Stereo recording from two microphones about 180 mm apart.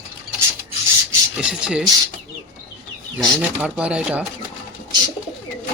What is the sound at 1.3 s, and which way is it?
Speech, 5° right (ahead or behind).